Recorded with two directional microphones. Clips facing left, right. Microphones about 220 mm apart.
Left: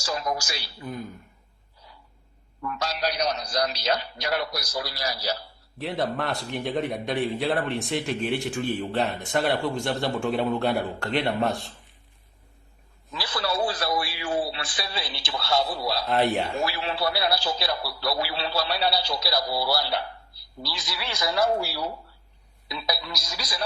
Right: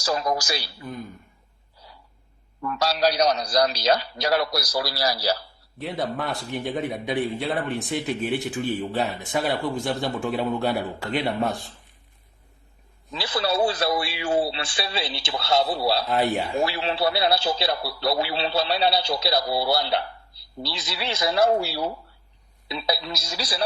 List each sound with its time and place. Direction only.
0.3 s a man's voice: 40° right (ahead or behind)
0.8 s a man's voice: centre (ahead or behind)
2.6 s a man's voice: 35° right (ahead or behind)
5.7 s a man's voice: centre (ahead or behind)
13.1 s a man's voice: 25° right (ahead or behind)
16.0 s a man's voice: centre (ahead or behind)
16.6 s a man's voice: 25° right (ahead or behind)